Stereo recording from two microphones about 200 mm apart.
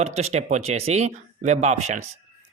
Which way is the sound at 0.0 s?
35° right (ahead or behind).